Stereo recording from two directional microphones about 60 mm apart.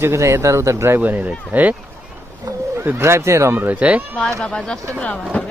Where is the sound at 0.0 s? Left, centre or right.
Right.